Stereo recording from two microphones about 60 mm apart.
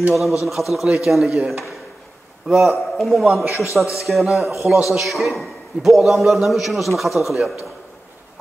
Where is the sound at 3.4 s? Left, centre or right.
Left.